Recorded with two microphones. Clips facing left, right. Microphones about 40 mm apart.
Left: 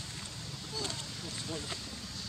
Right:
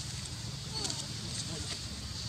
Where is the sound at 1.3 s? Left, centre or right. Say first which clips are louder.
Left 5 dB; centre.